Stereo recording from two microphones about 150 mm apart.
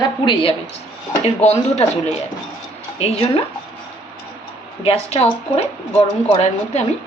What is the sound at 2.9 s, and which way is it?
Speech, 45° left (ahead or behind).